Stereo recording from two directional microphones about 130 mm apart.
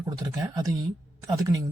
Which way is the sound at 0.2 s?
25° right (ahead or behind).